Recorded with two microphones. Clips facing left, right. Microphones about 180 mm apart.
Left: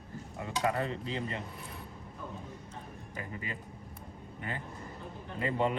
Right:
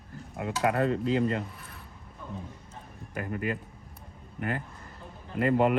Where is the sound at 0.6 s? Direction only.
60° right (ahead or behind).